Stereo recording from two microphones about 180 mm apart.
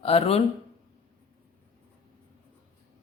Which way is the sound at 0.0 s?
35° left (ahead or behind).